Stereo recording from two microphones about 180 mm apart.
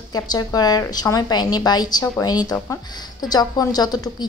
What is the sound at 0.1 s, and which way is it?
A woman's voice, 20° left (ahead or behind).